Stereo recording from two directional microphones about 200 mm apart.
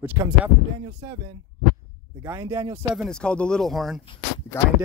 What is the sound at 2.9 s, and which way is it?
Speech, centre (ahead or behind).